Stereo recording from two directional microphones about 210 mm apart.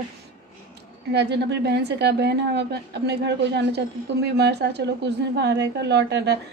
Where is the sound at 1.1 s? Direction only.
55° right (ahead or behind).